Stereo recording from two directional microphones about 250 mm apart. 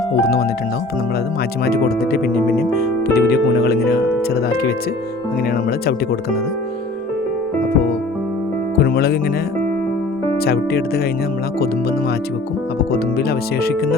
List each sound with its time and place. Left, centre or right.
1.6 s speech: left
8.8 s speech: left
10.4 s speech: left
12.9 s speech: left